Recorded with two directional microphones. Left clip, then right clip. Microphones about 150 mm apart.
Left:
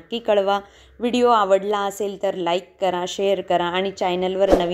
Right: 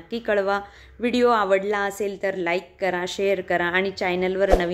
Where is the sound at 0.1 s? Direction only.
15° left (ahead or behind).